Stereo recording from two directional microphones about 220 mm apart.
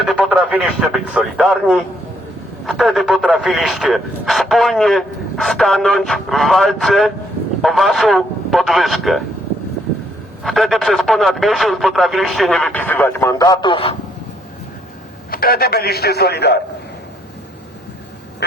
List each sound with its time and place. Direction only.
0.0 s speech: 5° right (ahead or behind)
10.4 s speech: centre (ahead or behind); by 13.9 s 25° left (ahead or behind)
15.3 s a man's voice: 45° left (ahead or behind)